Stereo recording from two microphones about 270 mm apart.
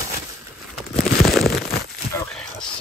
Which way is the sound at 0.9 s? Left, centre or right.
Centre.